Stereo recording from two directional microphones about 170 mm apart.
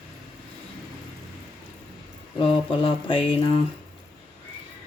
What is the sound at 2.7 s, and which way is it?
Speech, 30° left (ahead or behind).